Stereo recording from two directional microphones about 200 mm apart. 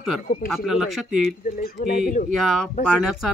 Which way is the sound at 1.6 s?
45° left (ahead or behind).